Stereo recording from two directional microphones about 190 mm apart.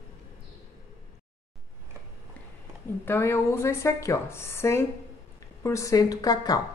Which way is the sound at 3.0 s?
10° left (ahead or behind).